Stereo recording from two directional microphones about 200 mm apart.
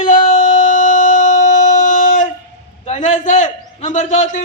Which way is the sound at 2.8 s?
35° left (ahead or behind).